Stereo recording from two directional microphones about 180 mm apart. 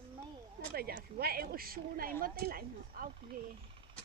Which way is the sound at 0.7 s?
55° right (ahead or behind).